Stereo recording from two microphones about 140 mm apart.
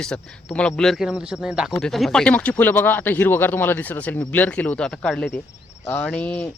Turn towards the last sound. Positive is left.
turn(degrees=10)  # may be behind; listen again after turning